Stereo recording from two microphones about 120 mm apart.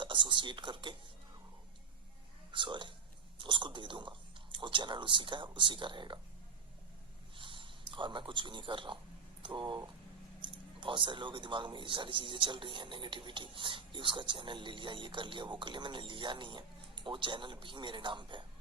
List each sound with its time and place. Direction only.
0.0 s speech: 40° right (ahead or behind)
2.5 s speech: 45° right (ahead or behind)
7.3 s a man's voice: 45° right (ahead or behind)